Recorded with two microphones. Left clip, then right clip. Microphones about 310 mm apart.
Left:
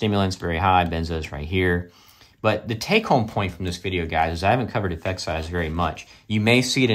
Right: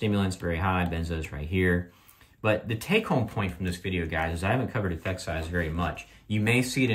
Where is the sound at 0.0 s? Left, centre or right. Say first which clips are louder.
Left 6 dB; centre.